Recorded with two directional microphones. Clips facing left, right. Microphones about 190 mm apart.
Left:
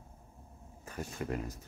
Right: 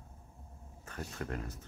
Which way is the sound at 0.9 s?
10° left (ahead or behind).